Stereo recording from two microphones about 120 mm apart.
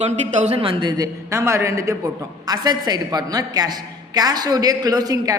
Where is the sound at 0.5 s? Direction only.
40° right (ahead or behind).